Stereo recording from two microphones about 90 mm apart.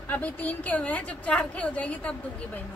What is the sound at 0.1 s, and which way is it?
A woman's voice, 15° left (ahead or behind).